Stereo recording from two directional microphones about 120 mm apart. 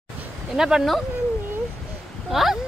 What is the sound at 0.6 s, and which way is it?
Speech, 5° right (ahead or behind).